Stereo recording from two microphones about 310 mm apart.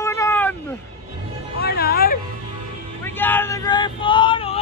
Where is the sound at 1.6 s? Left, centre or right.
Left.